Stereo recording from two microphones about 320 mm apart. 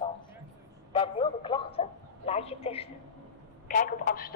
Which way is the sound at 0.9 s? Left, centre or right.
Centre.